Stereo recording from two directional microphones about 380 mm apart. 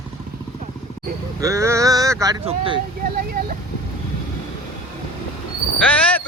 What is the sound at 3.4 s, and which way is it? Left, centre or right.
Speech, right.